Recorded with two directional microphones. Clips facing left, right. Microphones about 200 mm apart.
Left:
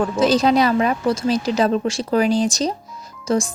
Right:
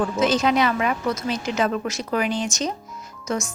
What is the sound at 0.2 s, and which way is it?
Speech, 35° left (ahead or behind).